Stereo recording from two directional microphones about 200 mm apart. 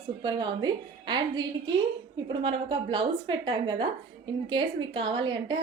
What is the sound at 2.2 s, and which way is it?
A woman's voice, 25° right (ahead or behind).